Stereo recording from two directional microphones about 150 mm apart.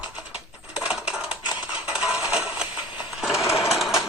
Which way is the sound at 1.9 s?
5° right (ahead or behind).